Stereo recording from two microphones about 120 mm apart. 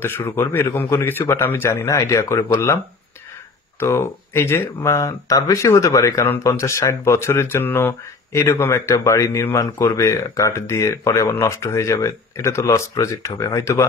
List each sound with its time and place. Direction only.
0.0 s speech: 20° left (ahead or behind)
3.8 s speech: 20° left (ahead or behind)